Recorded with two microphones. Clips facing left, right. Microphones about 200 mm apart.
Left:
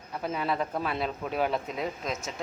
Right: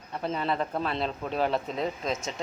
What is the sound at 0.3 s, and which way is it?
Speech, 5° left (ahead or behind).